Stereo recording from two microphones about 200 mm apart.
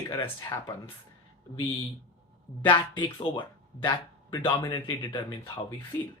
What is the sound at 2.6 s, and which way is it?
Speech, 25° left (ahead or behind).